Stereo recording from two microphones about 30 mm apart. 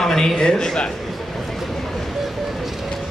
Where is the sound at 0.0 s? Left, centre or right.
Centre.